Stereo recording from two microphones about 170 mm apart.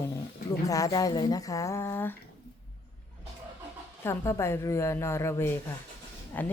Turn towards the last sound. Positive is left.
turn(degrees=10)  # may be behind; listen again after turning